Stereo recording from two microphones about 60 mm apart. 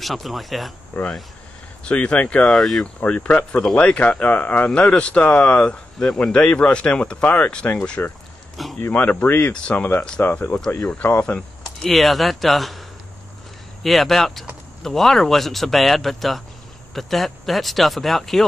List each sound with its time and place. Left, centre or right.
0.0 s speech: centre
1.9 s speech: centre
2.4 s speech: centre
3.0 s speech: left
8.6 s speech: centre
8.9 s speech: left
9.5 s speech: centre
9.8 s speech: left
10.8 s speech: centre
11.1 s speech: left
11.8 s speech: centre
13.8 s speech: centre